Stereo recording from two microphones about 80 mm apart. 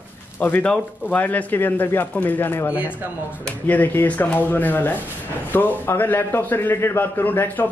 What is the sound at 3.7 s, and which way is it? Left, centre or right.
A man's voice, left.